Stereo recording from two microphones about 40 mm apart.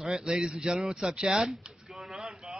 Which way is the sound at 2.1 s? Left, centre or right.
Centre.